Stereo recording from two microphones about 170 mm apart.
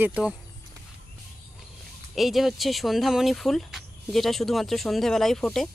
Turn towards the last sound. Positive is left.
turn(degrees=0)  # may be behind; listen again after turning